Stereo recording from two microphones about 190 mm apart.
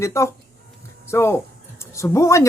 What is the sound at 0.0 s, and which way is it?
Speech, 15° left (ahead or behind).